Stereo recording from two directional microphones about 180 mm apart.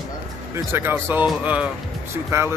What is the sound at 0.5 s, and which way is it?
Speech, 15° right (ahead or behind).